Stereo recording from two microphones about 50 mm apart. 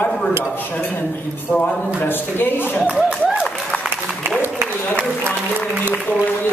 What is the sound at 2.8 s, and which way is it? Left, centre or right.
Speech, centre.